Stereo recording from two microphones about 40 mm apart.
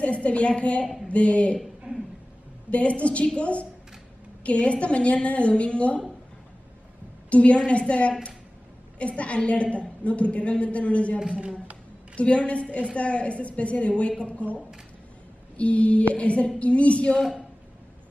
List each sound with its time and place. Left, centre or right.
0.0 s a woman's voice: left
1.9 s a sound: right
2.7 s a woman's voice: left
7.2 s a woman's voice: left
12.2 s a woman's voice: left
15.5 s a woman's voice: left